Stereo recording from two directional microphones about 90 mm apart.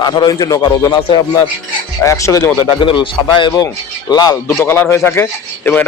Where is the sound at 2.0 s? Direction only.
35° left (ahead or behind).